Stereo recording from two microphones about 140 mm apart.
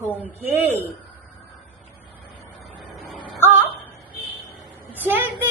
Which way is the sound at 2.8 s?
Centre (ahead or behind).